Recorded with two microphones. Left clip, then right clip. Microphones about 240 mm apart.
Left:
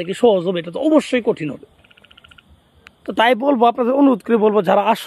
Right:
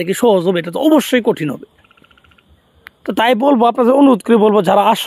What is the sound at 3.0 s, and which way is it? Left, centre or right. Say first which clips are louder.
Speech: right 3 dB; right.